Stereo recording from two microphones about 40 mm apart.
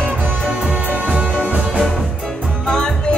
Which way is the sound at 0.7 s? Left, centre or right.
Right.